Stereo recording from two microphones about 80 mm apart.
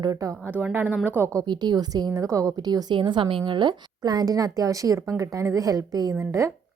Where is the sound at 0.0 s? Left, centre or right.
Right.